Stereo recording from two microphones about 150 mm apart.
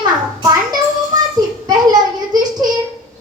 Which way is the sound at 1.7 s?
25° right (ahead or behind).